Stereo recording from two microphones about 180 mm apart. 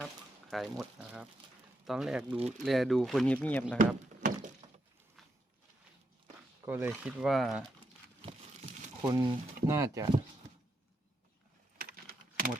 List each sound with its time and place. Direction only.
0.5 s speech: centre (ahead or behind)
3.8 s a sound: 45° right (ahead or behind)
6.7 s speech: 10° right (ahead or behind)
8.2 s a sound: 30° right (ahead or behind)
9.0 s speech: 25° right (ahead or behind)
11.8 s computer keyboard: 55° right (ahead or behind)